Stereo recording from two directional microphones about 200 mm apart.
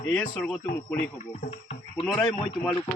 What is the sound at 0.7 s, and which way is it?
Speech, 10° left (ahead or behind).